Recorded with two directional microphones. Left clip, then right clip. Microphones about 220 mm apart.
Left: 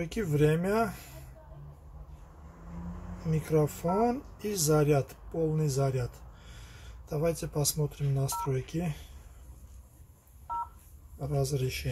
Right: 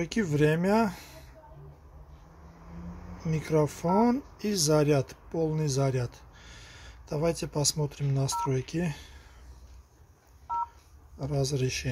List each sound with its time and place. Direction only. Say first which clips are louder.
0.0 s speech: right 2 dB; 30° right (ahead or behind)
3.3 s speech: right 1 dB; 30° right (ahead or behind)
11.1 s speech: right 2 dB; 30° right (ahead or behind)